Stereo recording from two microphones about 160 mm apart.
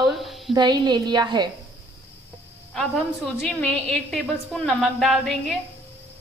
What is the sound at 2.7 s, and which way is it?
A woman's voice, centre (ahead or behind).